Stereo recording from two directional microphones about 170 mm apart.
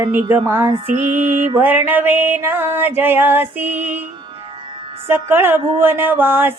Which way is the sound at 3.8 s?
45° right (ahead or behind).